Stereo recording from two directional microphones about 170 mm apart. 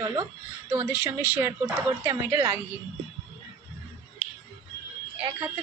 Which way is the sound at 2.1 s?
20° right (ahead or behind).